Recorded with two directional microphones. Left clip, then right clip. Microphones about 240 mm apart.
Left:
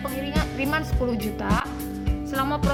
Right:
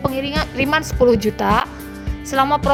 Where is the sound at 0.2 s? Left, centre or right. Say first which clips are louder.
Right 7 dB; right.